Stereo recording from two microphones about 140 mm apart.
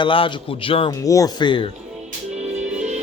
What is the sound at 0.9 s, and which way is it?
Speech, 25° left (ahead or behind).